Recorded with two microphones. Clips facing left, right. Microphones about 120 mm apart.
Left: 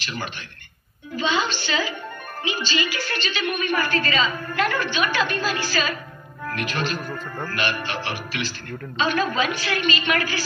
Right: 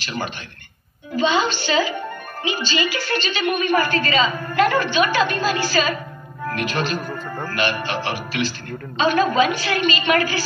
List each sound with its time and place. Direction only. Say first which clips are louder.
0.0 s a woman's voice: right 4 dB; 30° right (ahead or behind)
7.0 s speech: right 3 dB; 10° right (ahead or behind)
7.4 s a woman's voice: right 4 dB; 30° right (ahead or behind)